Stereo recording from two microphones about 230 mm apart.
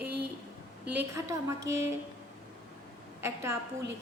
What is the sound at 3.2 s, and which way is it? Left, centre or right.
Speech, centre.